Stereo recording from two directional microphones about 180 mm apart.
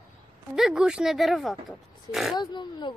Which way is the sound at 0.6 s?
5° right (ahead or behind).